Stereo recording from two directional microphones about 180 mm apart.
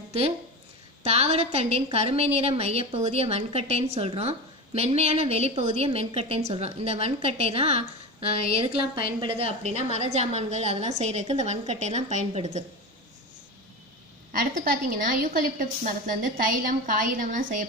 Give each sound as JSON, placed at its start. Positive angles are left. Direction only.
{"t": 1.0, "sound": "a woman's voice", "side_deg": -35}
{"t": 14.4, "sound": "a woman's voice", "side_deg": -55}